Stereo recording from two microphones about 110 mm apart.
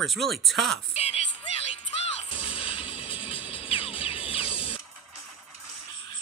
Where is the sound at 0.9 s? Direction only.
70° left (ahead or behind).